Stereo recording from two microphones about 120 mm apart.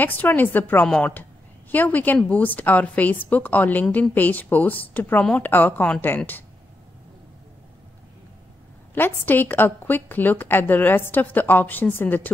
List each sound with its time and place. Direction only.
0.0 s a woman's voice: 15° left (ahead or behind)
8.9 s a woman's voice: 15° left (ahead or behind)